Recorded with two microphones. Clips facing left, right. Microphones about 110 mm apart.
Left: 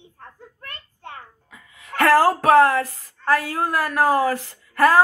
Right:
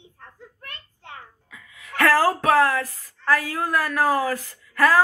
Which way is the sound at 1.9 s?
30° left (ahead or behind).